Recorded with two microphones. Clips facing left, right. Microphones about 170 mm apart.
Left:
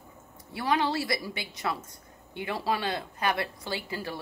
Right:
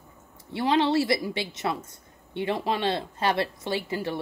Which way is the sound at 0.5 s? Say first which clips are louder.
Right 5 dB; 25° right (ahead or behind).